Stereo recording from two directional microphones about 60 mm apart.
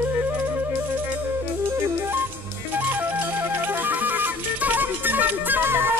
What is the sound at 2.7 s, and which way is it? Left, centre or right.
Music, right.